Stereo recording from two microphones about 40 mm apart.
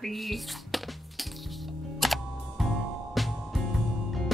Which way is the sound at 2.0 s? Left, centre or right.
Centre.